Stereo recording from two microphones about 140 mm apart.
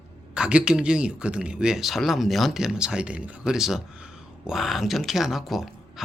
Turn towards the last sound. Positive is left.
turn(degrees=0)  # may be behind; listen again after turning